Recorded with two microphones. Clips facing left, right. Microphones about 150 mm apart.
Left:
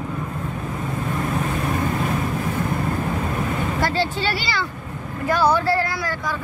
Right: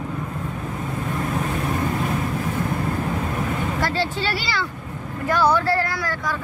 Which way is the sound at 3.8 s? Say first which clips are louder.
Left 3 dB; 15° left (ahead or behind).